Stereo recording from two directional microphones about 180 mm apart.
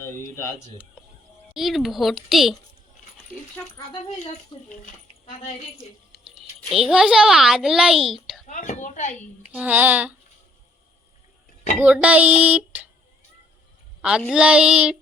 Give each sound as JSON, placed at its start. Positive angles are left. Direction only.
{"t": 1.5, "sound": "a child's voice", "side_deg": 0}
{"t": 4.5, "sound": "speech", "side_deg": 25}
{"t": 6.7, "sound": "a child's voice", "side_deg": 0}
{"t": 8.4, "sound": "a woman's voice", "side_deg": 45}
{"t": 9.5, "sound": "a sound", "side_deg": -10}
{"t": 11.8, "sound": "a sound", "side_deg": -5}
{"t": 14.0, "sound": "a child's voice", "side_deg": 0}